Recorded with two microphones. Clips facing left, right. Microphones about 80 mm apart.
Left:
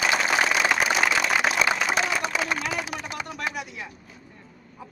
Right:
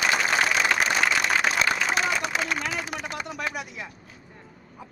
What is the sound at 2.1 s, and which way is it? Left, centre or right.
A man's voice, centre.